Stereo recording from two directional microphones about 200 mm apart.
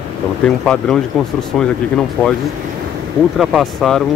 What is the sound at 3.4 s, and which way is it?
Speech, centre (ahead or behind).